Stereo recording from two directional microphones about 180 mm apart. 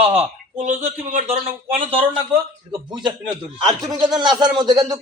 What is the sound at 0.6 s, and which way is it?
Speech, 40° right (ahead or behind).